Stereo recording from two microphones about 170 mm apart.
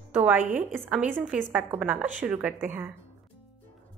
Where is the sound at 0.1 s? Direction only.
10° right (ahead or behind).